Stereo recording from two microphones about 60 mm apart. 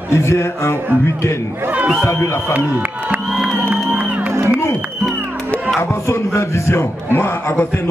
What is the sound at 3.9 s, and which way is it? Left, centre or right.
Music, right.